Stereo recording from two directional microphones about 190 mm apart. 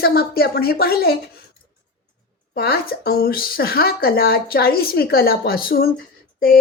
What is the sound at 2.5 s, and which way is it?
Speech, 55° left (ahead or behind).